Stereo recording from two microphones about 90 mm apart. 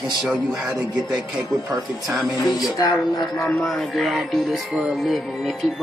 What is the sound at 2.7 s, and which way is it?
Speech, 50° left (ahead or behind).